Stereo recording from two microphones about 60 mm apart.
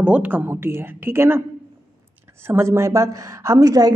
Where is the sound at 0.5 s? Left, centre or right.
Right.